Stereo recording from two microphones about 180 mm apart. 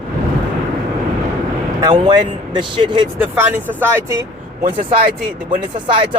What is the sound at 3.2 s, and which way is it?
Speech, 10° right (ahead or behind).